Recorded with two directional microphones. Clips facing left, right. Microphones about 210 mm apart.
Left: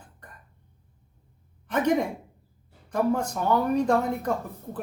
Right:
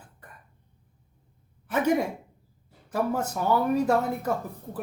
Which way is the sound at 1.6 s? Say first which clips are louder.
Even; 5° right (ahead or behind).